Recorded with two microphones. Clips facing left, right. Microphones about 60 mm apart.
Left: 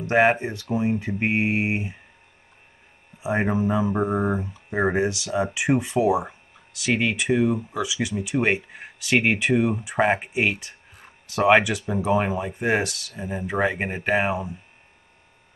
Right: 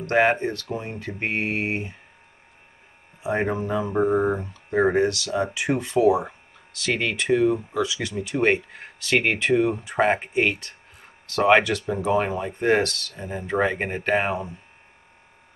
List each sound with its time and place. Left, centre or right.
0.0 s speech: centre
3.2 s speech: centre